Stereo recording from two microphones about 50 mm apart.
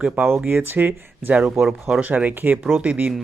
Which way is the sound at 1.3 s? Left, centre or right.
Right.